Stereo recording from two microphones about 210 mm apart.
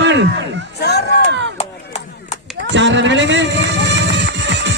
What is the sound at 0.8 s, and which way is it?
Speech, 50° left (ahead or behind).